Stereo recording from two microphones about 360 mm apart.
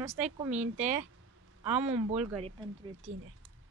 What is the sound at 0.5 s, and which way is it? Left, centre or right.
Speech, centre.